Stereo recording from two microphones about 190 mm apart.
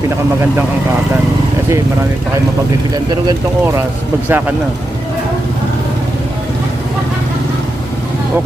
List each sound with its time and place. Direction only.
2.9 s speech: 20° right (ahead or behind)
4.3 s speech: 10° right (ahead or behind)